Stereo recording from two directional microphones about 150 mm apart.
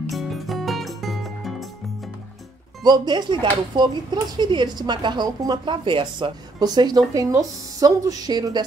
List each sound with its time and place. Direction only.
0.1 s music: centre (ahead or behind)
2.8 s speech: 30° right (ahead or behind)